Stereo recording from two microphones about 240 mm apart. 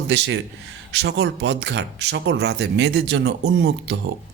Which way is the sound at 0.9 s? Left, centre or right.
Right.